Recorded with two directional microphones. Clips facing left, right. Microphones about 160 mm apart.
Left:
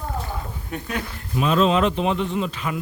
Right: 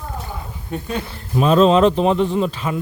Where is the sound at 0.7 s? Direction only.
30° right (ahead or behind).